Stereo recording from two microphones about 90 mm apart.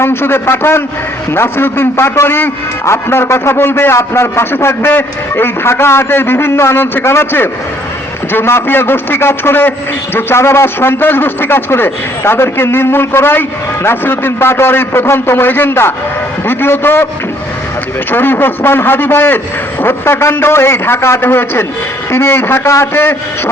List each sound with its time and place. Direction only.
0.0 s a man's voice: 25° left (ahead or behind)
18.1 s a man's voice: 25° left (ahead or behind)